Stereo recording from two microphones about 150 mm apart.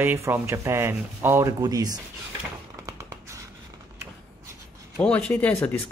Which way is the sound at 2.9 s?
20° right (ahead or behind).